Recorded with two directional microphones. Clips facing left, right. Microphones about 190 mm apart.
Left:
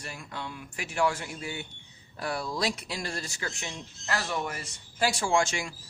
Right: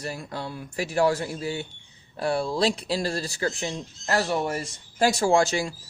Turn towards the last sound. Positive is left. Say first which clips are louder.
# right 6 dB
turn(degrees=-35)  # may be behind; listen again after turning